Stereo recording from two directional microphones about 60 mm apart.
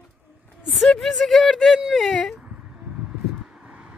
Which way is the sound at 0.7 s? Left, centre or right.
Centre.